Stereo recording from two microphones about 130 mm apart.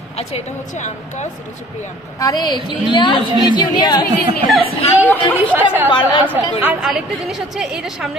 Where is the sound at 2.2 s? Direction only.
35° left (ahead or behind).